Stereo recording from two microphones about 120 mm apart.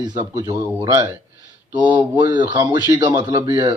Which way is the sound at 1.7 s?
40° right (ahead or behind).